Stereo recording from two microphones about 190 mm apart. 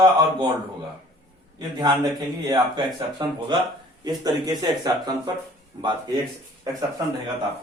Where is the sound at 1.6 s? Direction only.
20° right (ahead or behind).